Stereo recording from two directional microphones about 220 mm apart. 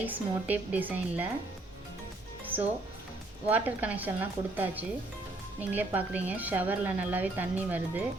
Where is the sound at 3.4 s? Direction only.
5° right (ahead or behind).